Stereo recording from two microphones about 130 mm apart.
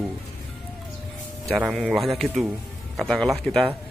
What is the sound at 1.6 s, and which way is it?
A man's voice, 5° right (ahead or behind).